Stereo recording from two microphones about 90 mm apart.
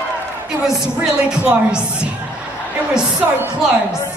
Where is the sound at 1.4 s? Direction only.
10° right (ahead or behind).